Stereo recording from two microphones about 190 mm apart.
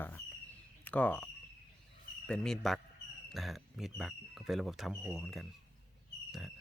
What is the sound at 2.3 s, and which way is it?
Speech, 5° left (ahead or behind).